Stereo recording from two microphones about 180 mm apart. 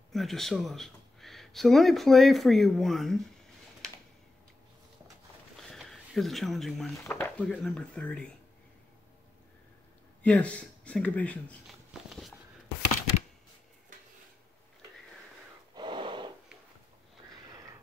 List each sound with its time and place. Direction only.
0.1 s speech: centre (ahead or behind)
5.6 s a sound: centre (ahead or behind)
7.0 s speech: 10° left (ahead or behind)
10.2 s speech: 5° left (ahead or behind)
11.9 s a sound: centre (ahead or behind)
15.7 s snort: 25° right (ahead or behind)